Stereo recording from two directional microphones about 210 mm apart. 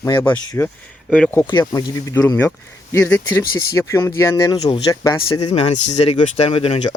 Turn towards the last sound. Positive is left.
turn(degrees=30)  # may be behind; listen again after turning